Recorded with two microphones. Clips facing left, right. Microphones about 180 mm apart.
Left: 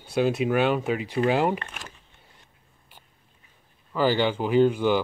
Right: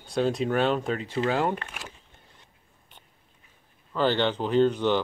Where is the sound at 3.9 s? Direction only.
10° left (ahead or behind).